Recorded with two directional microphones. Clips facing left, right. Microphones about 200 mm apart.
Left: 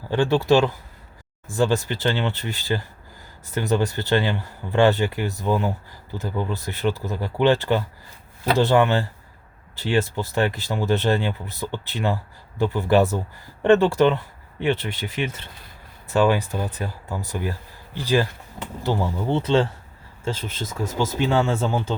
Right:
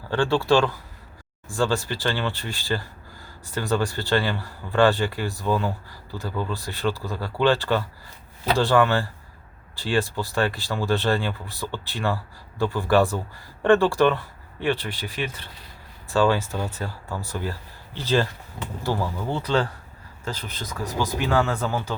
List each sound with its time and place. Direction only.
0.1 s speech: 20° left (ahead or behind)